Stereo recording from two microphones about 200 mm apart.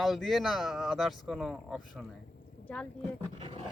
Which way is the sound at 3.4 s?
30° right (ahead or behind).